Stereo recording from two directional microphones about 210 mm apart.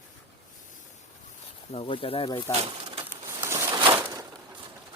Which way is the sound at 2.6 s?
25° right (ahead or behind).